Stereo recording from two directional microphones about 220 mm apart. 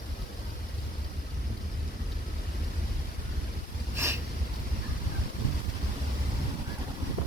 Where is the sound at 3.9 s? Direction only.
10° right (ahead or behind).